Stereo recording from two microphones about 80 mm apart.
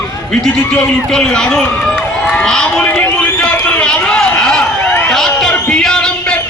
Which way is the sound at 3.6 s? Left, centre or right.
Centre.